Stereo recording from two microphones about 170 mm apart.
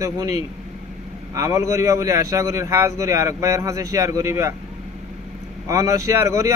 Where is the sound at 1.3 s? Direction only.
20° right (ahead or behind).